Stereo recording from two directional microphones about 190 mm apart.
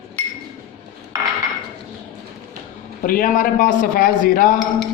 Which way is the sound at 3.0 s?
45° left (ahead or behind).